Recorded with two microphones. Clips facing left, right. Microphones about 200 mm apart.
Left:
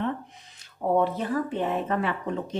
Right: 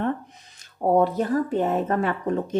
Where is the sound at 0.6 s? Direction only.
40° right (ahead or behind).